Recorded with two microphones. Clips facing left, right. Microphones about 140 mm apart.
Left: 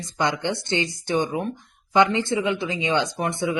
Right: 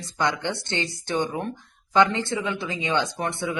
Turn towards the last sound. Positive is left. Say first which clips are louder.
# left 3 dB
turn(degrees=20)  # may be behind; listen again after turning